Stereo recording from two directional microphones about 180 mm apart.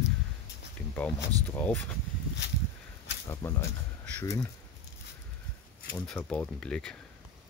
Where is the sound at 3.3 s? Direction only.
15° left (ahead or behind).